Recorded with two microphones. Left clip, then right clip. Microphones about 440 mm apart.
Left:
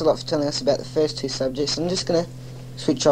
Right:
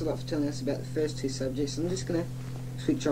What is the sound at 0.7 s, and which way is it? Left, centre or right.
Speech, left.